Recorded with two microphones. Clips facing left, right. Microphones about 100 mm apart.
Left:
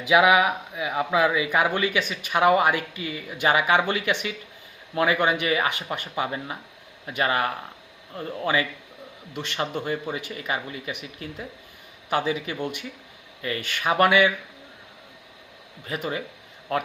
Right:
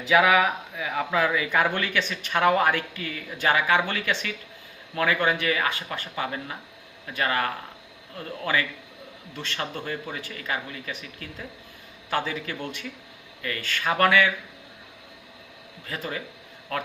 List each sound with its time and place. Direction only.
0.0 s speech: 15° left (ahead or behind)
9.3 s speech: 15° left (ahead or behind)
15.9 s speech: 20° left (ahead or behind)